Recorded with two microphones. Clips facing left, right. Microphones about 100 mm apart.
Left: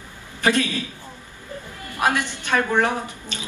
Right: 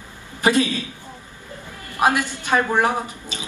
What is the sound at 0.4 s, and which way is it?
Speech, 15° right (ahead or behind).